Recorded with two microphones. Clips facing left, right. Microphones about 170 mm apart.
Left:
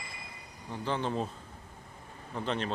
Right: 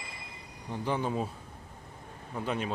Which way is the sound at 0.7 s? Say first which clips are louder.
Right 1 dB; 10° right (ahead or behind).